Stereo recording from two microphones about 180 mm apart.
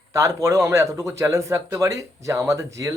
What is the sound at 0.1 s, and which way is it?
A man's voice, 15° right (ahead or behind).